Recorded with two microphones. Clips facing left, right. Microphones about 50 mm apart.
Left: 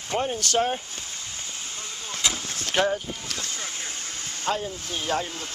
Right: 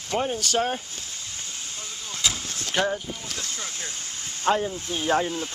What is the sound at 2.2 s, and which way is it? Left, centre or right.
Vehicle, centre.